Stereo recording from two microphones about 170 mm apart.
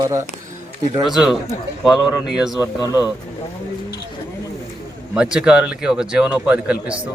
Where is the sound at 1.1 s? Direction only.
Centre (ahead or behind).